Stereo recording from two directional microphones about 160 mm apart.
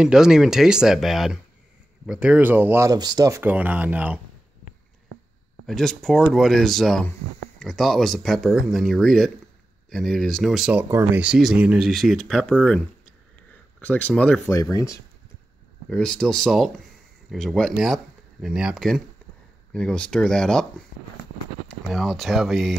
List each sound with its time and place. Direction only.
0.0 s speech: 5° right (ahead or behind)
5.7 s speech: centre (ahead or behind)
14.5 s speech: 20° left (ahead or behind)
15.9 s speech: 5° left (ahead or behind)
21.8 s speech: centre (ahead or behind)